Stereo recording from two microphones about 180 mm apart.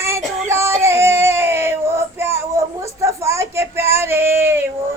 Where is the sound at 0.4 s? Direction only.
15° right (ahead or behind).